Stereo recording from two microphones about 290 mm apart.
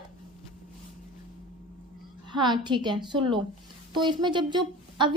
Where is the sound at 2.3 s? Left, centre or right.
Centre.